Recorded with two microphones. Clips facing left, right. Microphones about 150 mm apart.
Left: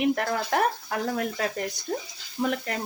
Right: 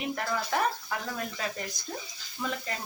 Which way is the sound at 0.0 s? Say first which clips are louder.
Left 7 dB; 60° left (ahead or behind).